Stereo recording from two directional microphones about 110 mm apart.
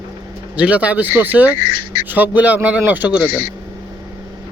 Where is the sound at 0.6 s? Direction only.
15° right (ahead or behind).